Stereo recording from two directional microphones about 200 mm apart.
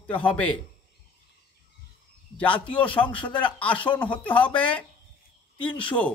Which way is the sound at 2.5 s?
25° left (ahead or behind).